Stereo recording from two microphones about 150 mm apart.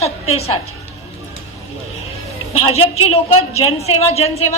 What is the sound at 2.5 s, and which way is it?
A woman's voice, 40° left (ahead or behind).